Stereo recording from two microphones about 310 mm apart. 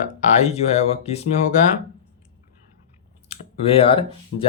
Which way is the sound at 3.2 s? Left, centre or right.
Centre.